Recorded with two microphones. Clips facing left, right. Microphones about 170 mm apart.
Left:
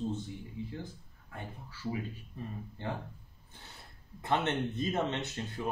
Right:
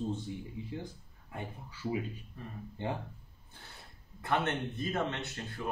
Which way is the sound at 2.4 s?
20° left (ahead or behind).